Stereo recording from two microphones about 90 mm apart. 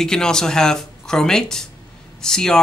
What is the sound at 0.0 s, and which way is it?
Speech, 5° left (ahead or behind).